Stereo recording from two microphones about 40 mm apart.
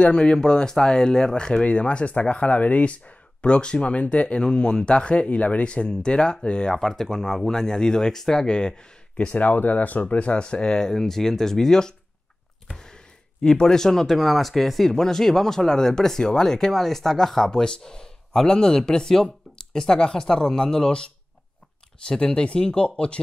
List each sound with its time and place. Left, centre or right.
0.0 s speech: left
3.4 s speech: left
6.7 s speech: centre
8.5 s speech: left
9.3 s speech: left; by 11.9 s centre
13.4 s speech: centre
22.2 s speech: left